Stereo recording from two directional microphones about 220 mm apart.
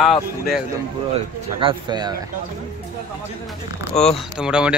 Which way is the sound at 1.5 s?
20° right (ahead or behind).